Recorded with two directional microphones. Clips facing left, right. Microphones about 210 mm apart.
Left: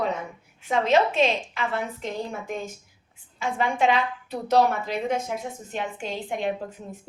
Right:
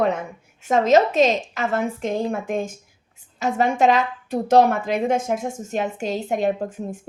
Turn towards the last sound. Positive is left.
turn(degrees=-50)  # may be behind; listen again after turning